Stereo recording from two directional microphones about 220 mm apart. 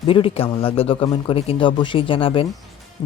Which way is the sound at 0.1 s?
25° left (ahead or behind).